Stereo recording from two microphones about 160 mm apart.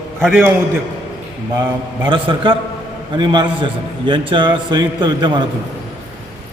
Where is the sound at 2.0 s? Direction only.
30° right (ahead or behind).